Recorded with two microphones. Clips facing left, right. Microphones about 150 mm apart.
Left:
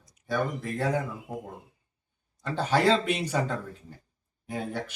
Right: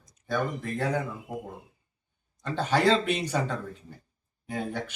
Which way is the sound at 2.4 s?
10° left (ahead or behind).